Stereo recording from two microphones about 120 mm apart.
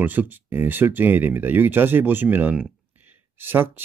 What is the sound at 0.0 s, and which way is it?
Speech, 15° right (ahead or behind).